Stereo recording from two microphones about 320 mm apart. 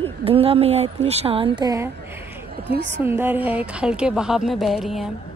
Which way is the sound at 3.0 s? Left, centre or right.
Centre.